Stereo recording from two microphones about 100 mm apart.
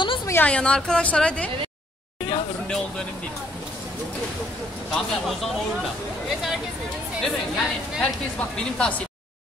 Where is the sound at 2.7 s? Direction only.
5° left (ahead or behind).